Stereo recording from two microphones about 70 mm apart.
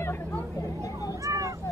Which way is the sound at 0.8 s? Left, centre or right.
Left.